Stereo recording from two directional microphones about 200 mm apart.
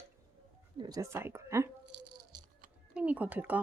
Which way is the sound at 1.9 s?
60° right (ahead or behind).